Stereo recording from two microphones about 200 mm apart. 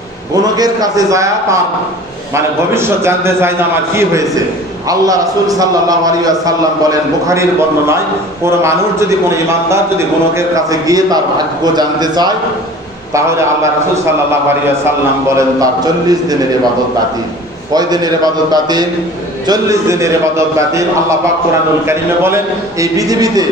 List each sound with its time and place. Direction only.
0.4 s a man's voice: 20° right (ahead or behind)
17.7 s a man's voice: 20° right (ahead or behind)